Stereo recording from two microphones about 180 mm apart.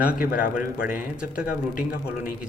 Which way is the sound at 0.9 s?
5° right (ahead or behind).